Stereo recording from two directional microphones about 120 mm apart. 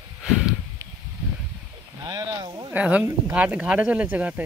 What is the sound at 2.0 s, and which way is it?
Speech, 30° right (ahead or behind).